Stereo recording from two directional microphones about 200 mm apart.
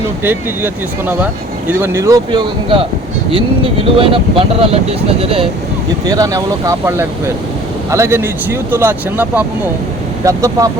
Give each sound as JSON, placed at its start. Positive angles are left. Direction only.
{"t": 0.2, "sound": "speech", "side_deg": -10}
{"t": 3.9, "sound": "speech", "side_deg": -25}